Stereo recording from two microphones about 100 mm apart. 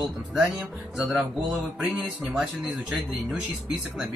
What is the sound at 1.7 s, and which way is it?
Speech, 5° right (ahead or behind).